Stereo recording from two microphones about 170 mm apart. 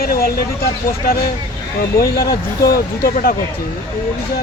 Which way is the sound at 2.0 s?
65° left (ahead or behind).